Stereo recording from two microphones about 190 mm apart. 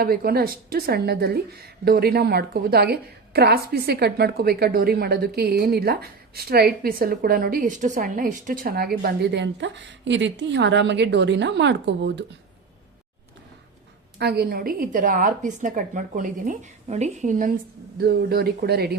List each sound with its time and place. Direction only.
0.0 s a woman's voice: 50° right (ahead or behind)
14.2 s a woman's voice: 55° right (ahead or behind); by 17.5 s 40° right (ahead or behind)
17.9 s a woman's voice: 55° right (ahead or behind)